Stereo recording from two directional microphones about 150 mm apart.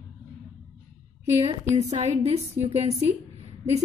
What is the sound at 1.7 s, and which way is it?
A woman's voice, 50° right (ahead or behind).